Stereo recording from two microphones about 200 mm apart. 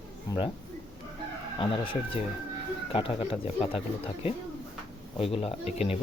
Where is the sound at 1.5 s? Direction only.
25° left (ahead or behind).